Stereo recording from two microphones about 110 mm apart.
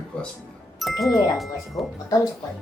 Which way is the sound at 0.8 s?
Centre (ahead or behind).